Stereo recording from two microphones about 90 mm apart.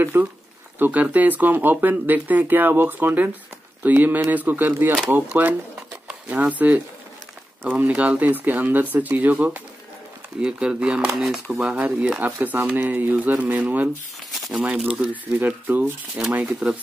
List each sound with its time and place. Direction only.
0.0 s speech: 25° right (ahead or behind)
11.1 s speech: centre (ahead or behind)
11.5 s speech: 10° right (ahead or behind)
14.9 s speech: 15° right (ahead or behind)